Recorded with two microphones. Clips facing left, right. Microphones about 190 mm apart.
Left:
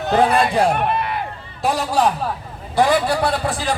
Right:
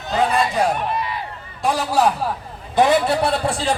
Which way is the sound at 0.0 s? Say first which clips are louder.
Left 3 dB; 60° left (ahead or behind).